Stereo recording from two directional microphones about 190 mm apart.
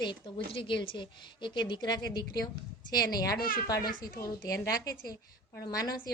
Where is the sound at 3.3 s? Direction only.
50° left (ahead or behind).